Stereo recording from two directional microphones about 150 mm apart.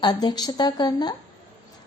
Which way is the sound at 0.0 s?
30° left (ahead or behind).